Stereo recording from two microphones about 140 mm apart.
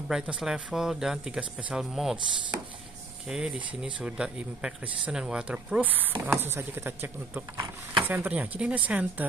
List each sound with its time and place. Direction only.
0.1 s speech: 5° right (ahead or behind)
3.3 s speech: 5° right (ahead or behind)